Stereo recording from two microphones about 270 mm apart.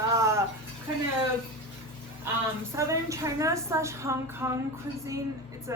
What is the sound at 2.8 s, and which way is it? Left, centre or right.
A woman's voice, centre.